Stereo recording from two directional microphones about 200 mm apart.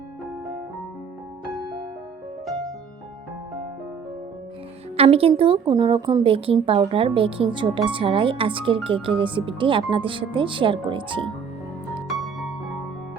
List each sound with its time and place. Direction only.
4.9 s speech: 30° right (ahead or behind)
12.0 s music: centre (ahead or behind)